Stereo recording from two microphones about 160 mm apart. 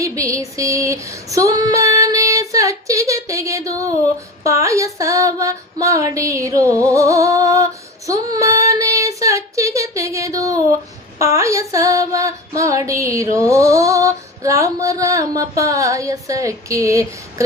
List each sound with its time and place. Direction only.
0.0 s female singing: 20° right (ahead or behind)